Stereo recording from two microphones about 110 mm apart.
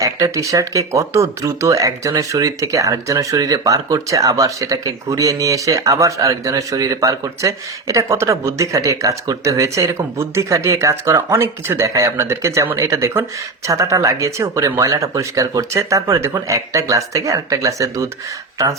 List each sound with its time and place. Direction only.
0.0 s speech: 30° right (ahead or behind)